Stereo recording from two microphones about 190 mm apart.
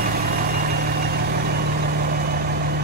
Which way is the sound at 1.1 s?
55° right (ahead or behind).